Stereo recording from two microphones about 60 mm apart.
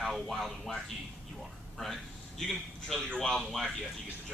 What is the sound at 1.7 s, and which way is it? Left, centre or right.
A man's voice, centre.